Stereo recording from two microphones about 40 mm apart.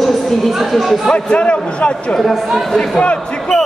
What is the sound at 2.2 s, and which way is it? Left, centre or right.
Speech, centre.